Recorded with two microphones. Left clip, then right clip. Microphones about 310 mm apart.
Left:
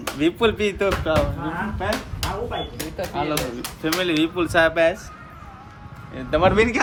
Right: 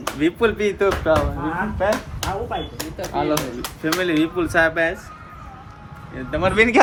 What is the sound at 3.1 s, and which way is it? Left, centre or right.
Speech, centre.